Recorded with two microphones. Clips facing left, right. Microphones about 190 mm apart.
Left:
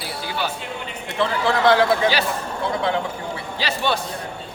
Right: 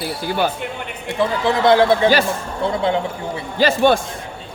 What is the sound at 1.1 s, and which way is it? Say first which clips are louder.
Speech: right 2 dB; 15° right (ahead or behind).